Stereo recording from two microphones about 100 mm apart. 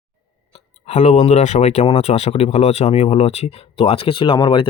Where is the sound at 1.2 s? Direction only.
90° left.